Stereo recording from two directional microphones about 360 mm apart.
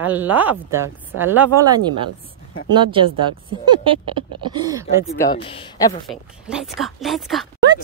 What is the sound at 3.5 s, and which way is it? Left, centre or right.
Speech, centre.